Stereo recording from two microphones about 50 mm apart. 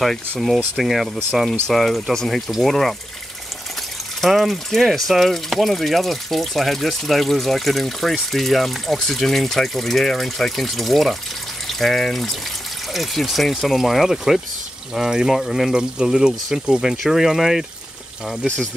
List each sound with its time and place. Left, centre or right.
0.0 s speech: centre
4.2 s speech: centre
15.7 s speech: centre